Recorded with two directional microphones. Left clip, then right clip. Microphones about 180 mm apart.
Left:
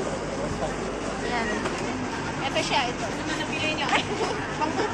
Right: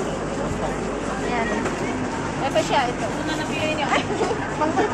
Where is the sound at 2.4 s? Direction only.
70° right (ahead or behind).